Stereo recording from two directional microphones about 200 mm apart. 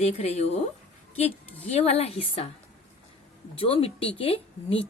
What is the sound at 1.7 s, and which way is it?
Speech, 30° left (ahead or behind).